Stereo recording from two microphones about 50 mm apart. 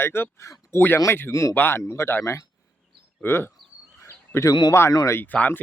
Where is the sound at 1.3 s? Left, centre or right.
Left.